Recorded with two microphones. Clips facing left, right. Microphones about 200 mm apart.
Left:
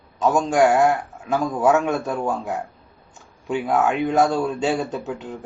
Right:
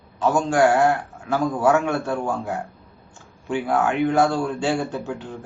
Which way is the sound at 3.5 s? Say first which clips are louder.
Left 1 dB; 20° left (ahead or behind).